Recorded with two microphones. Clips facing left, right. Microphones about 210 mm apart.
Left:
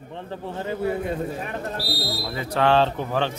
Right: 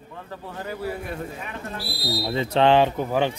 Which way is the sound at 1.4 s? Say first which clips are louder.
Left 4 dB; 40° left (ahead or behind).